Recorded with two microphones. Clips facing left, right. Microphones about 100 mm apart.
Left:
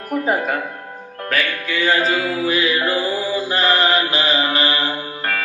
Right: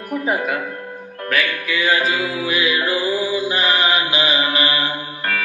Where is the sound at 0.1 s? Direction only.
35° left (ahead or behind).